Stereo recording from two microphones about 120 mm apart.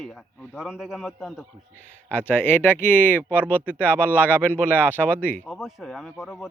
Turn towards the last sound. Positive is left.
turn(degrees=0)  # may be behind; listen again after turning